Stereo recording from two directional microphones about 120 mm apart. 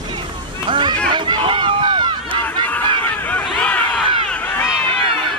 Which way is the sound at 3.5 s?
10° left (ahead or behind).